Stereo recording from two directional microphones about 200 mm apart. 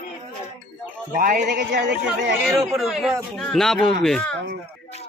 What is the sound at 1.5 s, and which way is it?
Speech, 60° right (ahead or behind).